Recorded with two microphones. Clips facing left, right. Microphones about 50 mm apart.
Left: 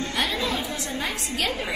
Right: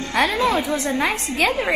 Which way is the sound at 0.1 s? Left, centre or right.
Right.